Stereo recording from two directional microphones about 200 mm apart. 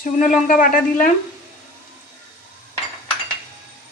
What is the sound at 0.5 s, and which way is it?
Speech, 45° left (ahead or behind).